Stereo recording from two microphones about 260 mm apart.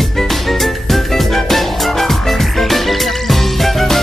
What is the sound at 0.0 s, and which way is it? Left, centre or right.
Music, centre.